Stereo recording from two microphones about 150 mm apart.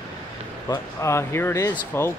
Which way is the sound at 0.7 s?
20° left (ahead or behind).